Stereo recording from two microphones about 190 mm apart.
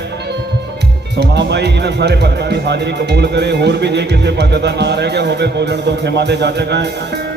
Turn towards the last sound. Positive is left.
turn(degrees=-60)  # may be behind; listen again after turning